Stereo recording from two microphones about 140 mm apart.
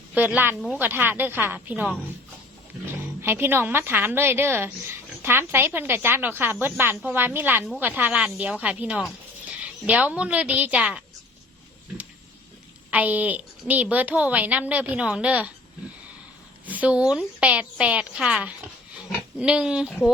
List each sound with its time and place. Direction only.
0.1 s a woman's voice: 10° right (ahead or behind)
3.2 s a woman's voice: 15° right (ahead or behind)
12.9 s a woman's voice: 10° right (ahead or behind)
16.6 s a woman's voice: 10° right (ahead or behind)